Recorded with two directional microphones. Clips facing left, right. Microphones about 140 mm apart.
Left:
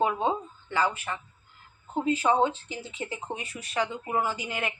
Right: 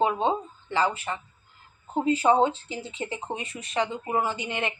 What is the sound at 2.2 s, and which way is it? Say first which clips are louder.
Speech: right 3 dB; 25° right (ahead or behind).